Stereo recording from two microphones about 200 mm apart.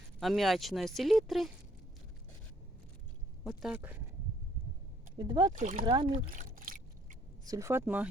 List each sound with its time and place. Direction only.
0.2 s speech: centre (ahead or behind)
3.4 s speech: 5° right (ahead or behind)
5.1 s speech: 20° right (ahead or behind)
5.5 s speech: 40° right (ahead or behind)
5.8 s speech: 25° right (ahead or behind)
6.1 s a sound: 40° right (ahead or behind)
7.4 s speech: 15° right (ahead or behind)